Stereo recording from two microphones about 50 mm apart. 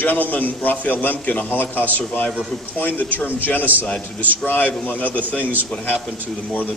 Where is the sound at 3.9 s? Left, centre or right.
Left.